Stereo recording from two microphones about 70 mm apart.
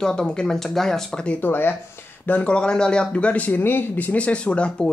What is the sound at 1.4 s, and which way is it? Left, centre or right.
Speech, left.